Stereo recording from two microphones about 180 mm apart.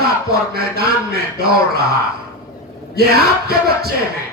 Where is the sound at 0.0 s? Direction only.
60° right (ahead or behind).